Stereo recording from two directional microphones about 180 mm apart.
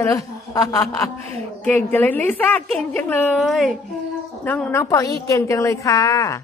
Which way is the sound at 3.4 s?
Centre (ahead or behind).